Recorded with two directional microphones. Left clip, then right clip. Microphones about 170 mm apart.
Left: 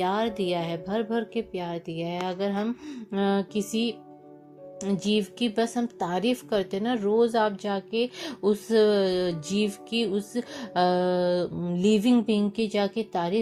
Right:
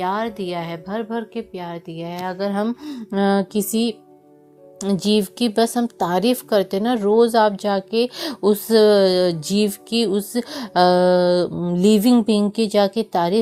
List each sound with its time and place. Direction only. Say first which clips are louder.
0.0 s a woman's voice: right 3 dB; 10° right (ahead or behind)
2.5 s a woman's voice: right 7 dB; 55° right (ahead or behind)